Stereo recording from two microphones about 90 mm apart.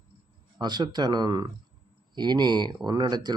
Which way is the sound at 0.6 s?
50° right (ahead or behind).